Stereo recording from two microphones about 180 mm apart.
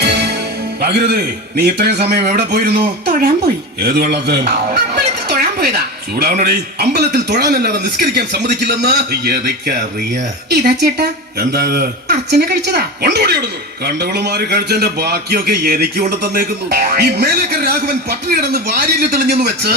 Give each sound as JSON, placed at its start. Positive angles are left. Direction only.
{"t": 0.0, "sound": "music", "side_deg": -65}
{"t": 0.8, "sound": "a man's voice", "side_deg": -60}